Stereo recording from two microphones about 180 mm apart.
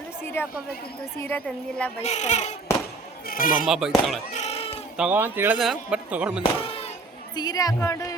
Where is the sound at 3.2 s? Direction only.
50° left (ahead or behind).